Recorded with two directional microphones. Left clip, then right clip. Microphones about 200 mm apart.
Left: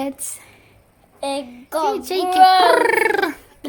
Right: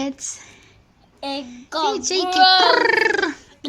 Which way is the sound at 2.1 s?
Centre (ahead or behind).